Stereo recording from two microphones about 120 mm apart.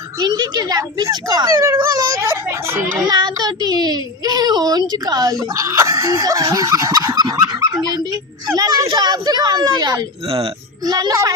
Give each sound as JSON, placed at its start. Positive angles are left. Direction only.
{"t": 0.2, "sound": "speech", "side_deg": -35}
{"t": 3.0, "sound": "a child's voice", "side_deg": -40}
{"t": 10.2, "sound": "speech", "side_deg": -50}
{"t": 10.8, "sound": "a child's voice", "side_deg": -35}